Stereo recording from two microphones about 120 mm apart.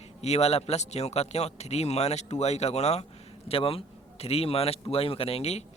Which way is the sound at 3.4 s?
50° left (ahead or behind).